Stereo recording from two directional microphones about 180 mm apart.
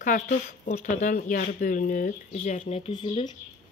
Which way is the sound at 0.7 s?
45° left (ahead or behind).